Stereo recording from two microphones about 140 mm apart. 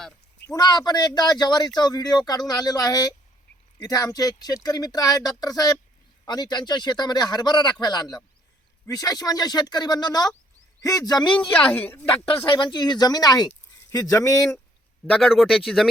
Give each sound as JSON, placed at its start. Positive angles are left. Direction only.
{"t": 0.4, "sound": "speech", "side_deg": 30}
{"t": 11.5, "sound": "a woman's voice", "side_deg": 10}
{"t": 12.3, "sound": "speech", "side_deg": 40}
{"t": 15.1, "sound": "speech", "side_deg": 0}